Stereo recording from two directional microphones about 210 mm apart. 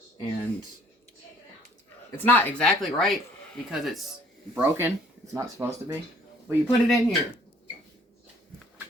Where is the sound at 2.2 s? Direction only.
10° left (ahead or behind); by 5.9 s 15° right (ahead or behind).